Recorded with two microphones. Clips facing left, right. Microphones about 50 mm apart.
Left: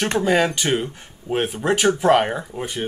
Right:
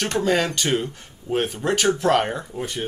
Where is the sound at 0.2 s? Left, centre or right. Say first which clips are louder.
Left 2 dB; centre.